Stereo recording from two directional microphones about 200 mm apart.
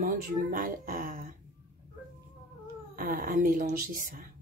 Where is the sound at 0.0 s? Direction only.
45° right (ahead or behind).